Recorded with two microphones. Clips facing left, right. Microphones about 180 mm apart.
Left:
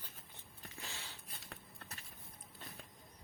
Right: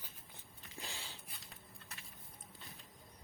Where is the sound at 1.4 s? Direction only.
65° left (ahead or behind).